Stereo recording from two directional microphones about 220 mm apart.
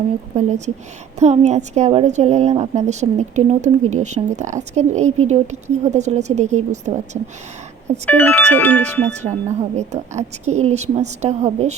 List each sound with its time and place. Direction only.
0.3 s a woman's voice: 30° right (ahead or behind)
8.0 s speech: 10° left (ahead or behind)
9.2 s a woman's voice: 25° right (ahead or behind)